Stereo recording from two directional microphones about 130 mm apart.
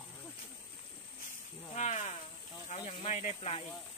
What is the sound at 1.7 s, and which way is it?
Snake, 65° left (ahead or behind).